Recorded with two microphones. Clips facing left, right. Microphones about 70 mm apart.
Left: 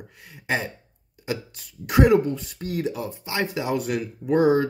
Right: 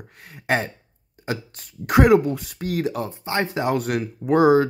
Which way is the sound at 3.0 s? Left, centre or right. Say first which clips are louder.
Right 3 dB; right.